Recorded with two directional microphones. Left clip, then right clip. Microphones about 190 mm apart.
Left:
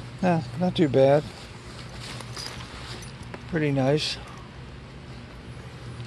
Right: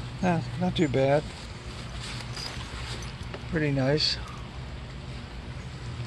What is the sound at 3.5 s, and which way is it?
Speech, 45° left (ahead or behind).